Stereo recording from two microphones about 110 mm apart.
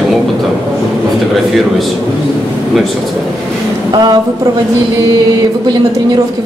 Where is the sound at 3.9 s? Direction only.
40° right (ahead or behind).